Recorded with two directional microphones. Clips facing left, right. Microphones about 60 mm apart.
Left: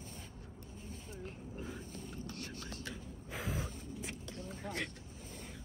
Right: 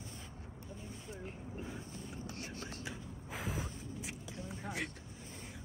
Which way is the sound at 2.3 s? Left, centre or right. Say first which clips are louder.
Right 1 dB; right.